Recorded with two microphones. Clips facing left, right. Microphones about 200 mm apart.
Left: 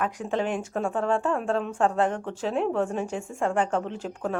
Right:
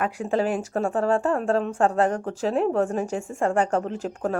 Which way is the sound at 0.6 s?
40° right (ahead or behind).